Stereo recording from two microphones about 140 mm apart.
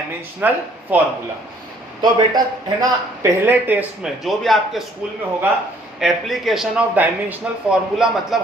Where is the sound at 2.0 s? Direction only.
30° right (ahead or behind).